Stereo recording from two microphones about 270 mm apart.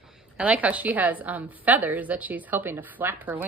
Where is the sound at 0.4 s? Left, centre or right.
Centre.